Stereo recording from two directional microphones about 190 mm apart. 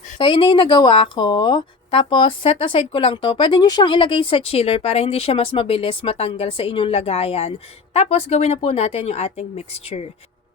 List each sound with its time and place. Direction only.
0.2 s a woman's voice: 25° left (ahead or behind)